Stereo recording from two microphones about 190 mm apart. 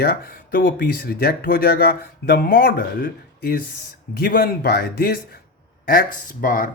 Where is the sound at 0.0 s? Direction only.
50° left (ahead or behind).